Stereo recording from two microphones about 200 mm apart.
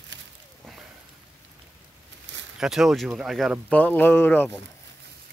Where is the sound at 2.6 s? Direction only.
Centre (ahead or behind).